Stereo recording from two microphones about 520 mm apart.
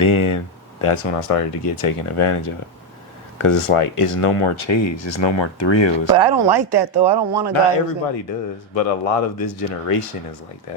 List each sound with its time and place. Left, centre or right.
0.0 s speech: left
0.8 s speech: left
6.1 s speech: right
7.5 s speech: left